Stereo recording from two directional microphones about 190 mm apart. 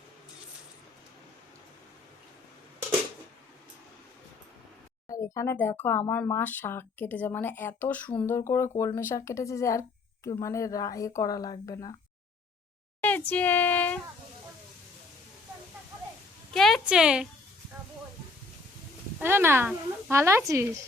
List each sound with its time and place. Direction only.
5.0 s speech: 15° left (ahead or behind)
13.0 s a child's voice: 10° left (ahead or behind)
16.6 s a woman's voice: centre (ahead or behind)
19.2 s a woman's voice: 10° right (ahead or behind)